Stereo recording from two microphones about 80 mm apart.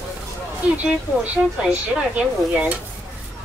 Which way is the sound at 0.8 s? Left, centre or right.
Centre.